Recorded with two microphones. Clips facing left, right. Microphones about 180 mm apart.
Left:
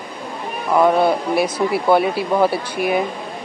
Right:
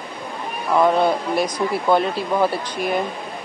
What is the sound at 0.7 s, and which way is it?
Speech, 10° left (ahead or behind).